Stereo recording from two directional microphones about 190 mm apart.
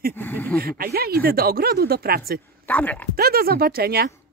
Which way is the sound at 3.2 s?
50° right (ahead or behind).